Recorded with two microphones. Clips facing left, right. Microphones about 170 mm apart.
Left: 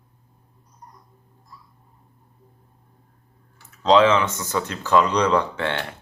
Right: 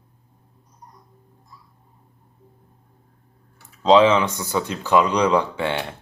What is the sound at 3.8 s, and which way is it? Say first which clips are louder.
Speech: right 2 dB; 15° right (ahead or behind).